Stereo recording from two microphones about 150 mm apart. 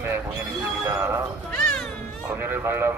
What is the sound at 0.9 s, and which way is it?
Speech, 15° right (ahead or behind).